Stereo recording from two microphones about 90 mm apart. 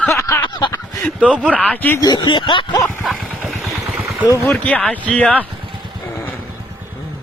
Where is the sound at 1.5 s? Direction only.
15° left (ahead or behind).